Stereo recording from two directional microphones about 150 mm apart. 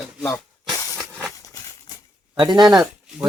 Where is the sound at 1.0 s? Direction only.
20° right (ahead or behind).